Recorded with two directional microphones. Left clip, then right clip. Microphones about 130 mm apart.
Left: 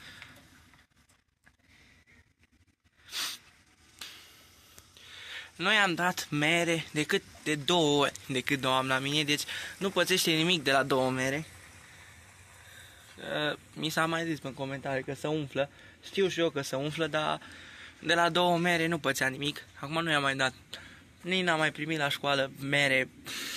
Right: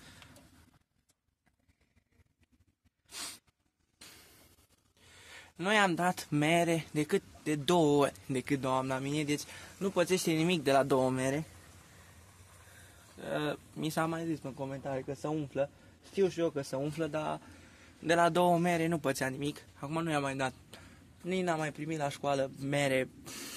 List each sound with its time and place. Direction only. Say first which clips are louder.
3.1 s a sound: left 9 dB; 20° right (ahead or behind)
5.0 s speech: left 10 dB; 20° right (ahead or behind); by 7.0 s 35° right (ahead or behind)
7.0 s a man's voice: left 2 dB; 20° right (ahead or behind)
10.4 s speech: left 2 dB; 20° right (ahead or behind)
13.2 s a sound: left 3 dB; 35° right (ahead or behind)
14.1 s speech: left 4 dB; 5° left (ahead or behind)
17.8 s a man's voice: left 1 dB; 25° right (ahead or behind)